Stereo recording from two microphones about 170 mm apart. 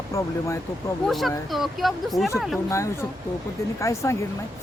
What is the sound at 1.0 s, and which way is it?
Speech, centre (ahead or behind).